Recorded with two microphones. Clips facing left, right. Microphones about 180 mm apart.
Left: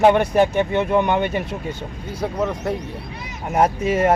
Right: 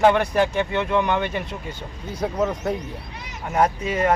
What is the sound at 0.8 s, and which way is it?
Speech, 40° left (ahead or behind).